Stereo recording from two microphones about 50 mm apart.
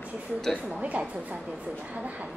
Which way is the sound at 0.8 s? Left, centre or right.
Right.